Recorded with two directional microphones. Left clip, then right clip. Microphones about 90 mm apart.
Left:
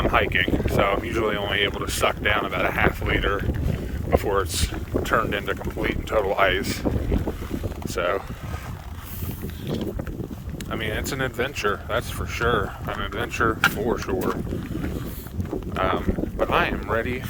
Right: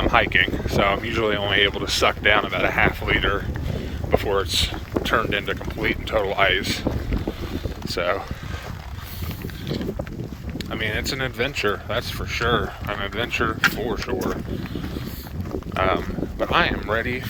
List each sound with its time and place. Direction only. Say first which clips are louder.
0.1 s speech: right 5 dB; 40° left (ahead or behind)
4.2 s speech: right 2 dB; 50° left (ahead or behind)
7.9 s speech: right 1 dB; 45° left (ahead or behind)
10.7 s speech: right 2 dB; 40° left (ahead or behind)
13.3 s speech: left 1 dB; 70° left (ahead or behind)
15.7 s speech: right 2 dB; 40° left (ahead or behind)